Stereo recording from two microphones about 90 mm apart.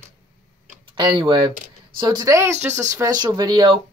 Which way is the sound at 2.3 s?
35° right (ahead or behind).